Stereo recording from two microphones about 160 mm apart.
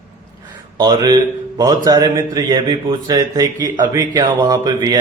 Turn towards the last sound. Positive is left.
turn(degrees=-25)  # may be behind; listen again after turning